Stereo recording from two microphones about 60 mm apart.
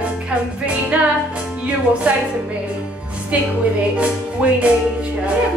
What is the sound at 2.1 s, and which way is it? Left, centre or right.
Music, right.